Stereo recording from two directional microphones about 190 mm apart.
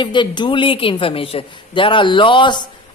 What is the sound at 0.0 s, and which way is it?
Speech, 25° left (ahead or behind).